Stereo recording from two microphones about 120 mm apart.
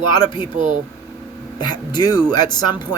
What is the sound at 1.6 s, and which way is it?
Speech, 35° left (ahead or behind).